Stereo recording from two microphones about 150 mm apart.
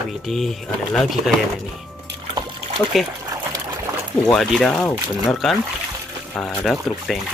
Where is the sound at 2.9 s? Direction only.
Centre (ahead or behind).